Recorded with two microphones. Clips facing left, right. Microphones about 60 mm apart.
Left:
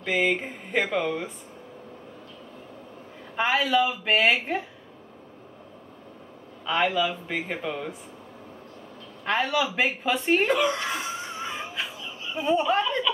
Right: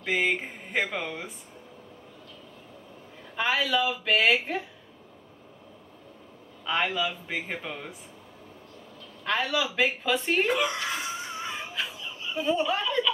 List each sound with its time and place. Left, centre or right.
0.0 s speech: centre
3.3 s a man's voice: centre
4.2 s speech: centre
6.6 s speech: centre
9.2 s a man's voice: left
9.6 s speech: centre
10.3 s a sound: centre
12.4 s speech: centre